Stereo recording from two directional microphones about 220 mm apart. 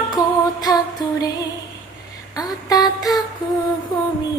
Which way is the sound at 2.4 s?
15° left (ahead or behind).